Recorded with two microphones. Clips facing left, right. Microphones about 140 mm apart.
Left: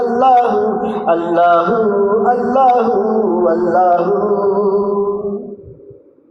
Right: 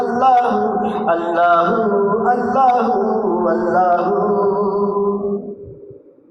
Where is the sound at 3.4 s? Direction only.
20° left (ahead or behind).